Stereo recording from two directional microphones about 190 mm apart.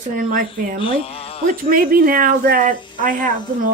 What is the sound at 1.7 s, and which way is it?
Speech, 50° right (ahead or behind).